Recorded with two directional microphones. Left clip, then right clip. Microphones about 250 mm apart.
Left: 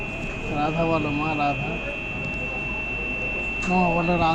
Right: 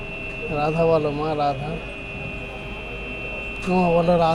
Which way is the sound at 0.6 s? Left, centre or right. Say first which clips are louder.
Right 4 dB; right.